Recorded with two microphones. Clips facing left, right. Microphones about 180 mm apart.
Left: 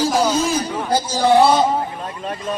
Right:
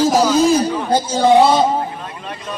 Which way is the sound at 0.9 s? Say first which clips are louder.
Right 2 dB; 20° right (ahead or behind).